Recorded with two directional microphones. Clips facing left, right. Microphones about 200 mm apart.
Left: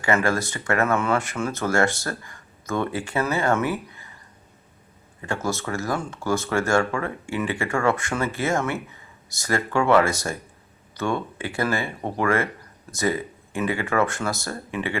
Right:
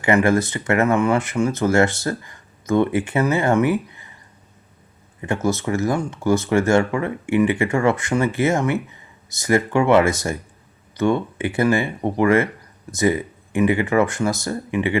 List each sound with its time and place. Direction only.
0.0 s speech: 20° right (ahead or behind)
5.2 s speech: 20° right (ahead or behind)